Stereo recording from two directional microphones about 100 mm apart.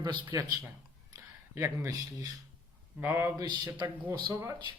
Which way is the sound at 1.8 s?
40° right (ahead or behind).